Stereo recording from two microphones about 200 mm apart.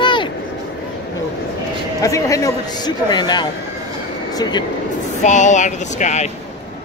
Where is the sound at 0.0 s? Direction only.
25° left (ahead or behind).